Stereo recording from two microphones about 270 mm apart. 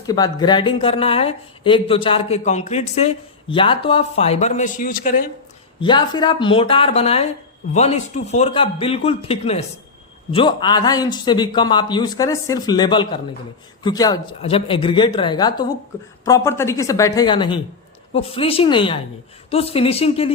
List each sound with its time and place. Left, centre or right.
0.0 s speech: centre; by 5.2 s left
5.8 s a man's voice: centre